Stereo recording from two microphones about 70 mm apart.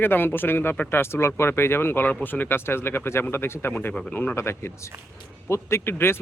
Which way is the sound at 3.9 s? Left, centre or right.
Centre.